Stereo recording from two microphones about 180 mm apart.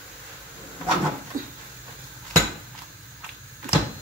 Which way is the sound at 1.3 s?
45° right (ahead or behind).